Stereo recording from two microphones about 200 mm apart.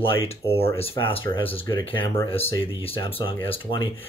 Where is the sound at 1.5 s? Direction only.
25° left (ahead or behind).